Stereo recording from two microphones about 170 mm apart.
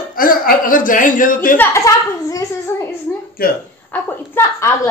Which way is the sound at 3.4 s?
60° left (ahead or behind).